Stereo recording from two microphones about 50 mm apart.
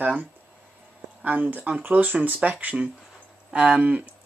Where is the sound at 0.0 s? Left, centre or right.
Right.